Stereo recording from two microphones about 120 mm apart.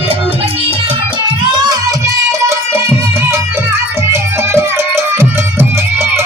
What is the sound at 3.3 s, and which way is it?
Music, 20° right (ahead or behind).